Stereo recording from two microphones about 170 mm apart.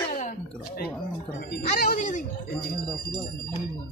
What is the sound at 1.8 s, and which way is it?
Speech, 50° left (ahead or behind).